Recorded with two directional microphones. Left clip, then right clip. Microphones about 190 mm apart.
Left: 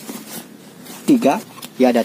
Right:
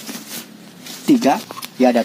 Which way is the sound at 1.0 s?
10° left (ahead or behind).